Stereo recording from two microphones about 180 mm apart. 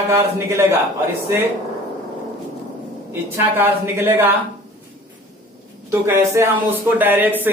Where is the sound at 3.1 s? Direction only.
10° right (ahead or behind).